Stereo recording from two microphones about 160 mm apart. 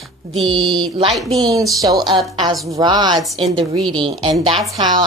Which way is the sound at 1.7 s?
25° right (ahead or behind).